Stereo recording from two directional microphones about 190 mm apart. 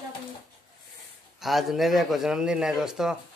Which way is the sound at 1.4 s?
Centre (ahead or behind).